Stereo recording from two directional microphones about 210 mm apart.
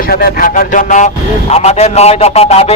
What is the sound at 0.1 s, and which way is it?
A man's voice, 45° left (ahead or behind).